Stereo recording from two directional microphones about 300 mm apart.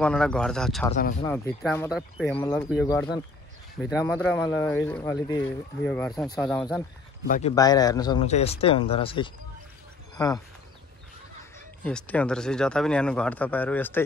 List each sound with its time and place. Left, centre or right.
0.0 s speech: centre
2.3 s speech: centre
7.2 s speech: left
7.5 s speech: centre
11.8 s speech: centre